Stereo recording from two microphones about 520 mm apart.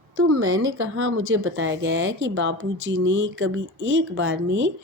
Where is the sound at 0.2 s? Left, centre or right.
Right.